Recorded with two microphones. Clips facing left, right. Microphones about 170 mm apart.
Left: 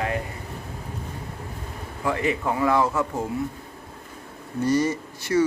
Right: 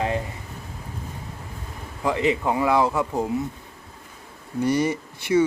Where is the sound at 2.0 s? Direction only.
20° right (ahead or behind).